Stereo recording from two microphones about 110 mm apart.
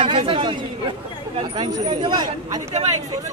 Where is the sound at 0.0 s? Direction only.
55° right (ahead or behind).